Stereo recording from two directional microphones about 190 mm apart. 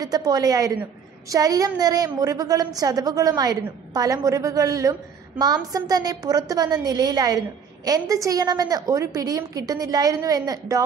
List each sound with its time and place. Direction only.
0.0 s a woman's voice: 20° right (ahead or behind)